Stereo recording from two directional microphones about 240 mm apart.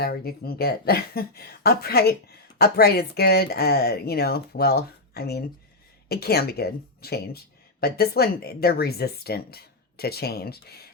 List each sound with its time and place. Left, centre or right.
0.0 s speech: left